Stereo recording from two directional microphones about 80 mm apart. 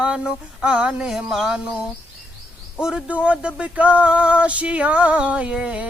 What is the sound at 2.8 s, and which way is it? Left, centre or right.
Speech, centre.